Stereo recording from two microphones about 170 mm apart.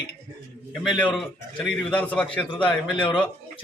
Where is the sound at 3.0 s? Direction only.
30° left (ahead or behind).